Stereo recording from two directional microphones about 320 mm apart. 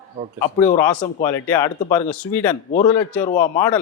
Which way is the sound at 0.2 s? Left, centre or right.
Right.